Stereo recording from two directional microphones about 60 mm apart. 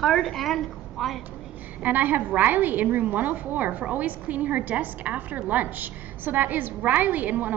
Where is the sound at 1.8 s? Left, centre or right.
Right.